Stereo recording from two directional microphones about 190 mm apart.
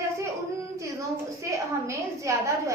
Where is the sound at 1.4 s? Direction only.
15° right (ahead or behind).